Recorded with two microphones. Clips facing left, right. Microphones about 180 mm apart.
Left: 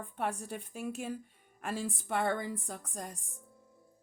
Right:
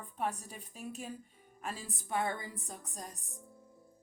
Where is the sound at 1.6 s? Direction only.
70° left (ahead or behind).